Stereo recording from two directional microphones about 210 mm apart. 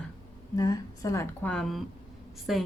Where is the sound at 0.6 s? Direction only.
15° left (ahead or behind).